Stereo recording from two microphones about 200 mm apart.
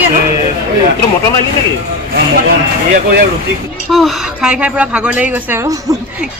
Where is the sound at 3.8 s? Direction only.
Centre (ahead or behind).